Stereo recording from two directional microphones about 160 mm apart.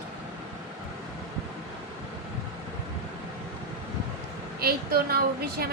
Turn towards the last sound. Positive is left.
turn(degrees=-75)  # may be behind; listen again after turning